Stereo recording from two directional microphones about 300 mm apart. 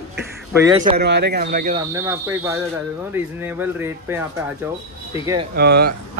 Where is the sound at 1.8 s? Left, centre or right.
Centre.